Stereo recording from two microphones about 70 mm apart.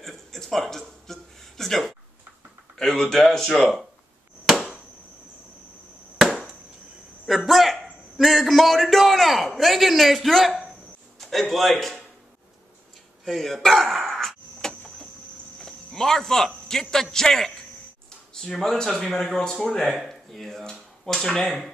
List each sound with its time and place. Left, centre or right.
0.0 s a sound: centre
3.0 s speech: centre
4.5 s chop: centre
6.1 s chop: centre
7.2 s a sound: centre
11.1 s a man's voice: centre
13.2 s a sound: centre
15.6 s cricket: centre
16.9 s a man's voice: centre
21.5 s a man's voice: centre